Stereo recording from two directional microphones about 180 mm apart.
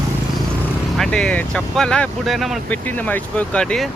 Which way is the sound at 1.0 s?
5° left (ahead or behind).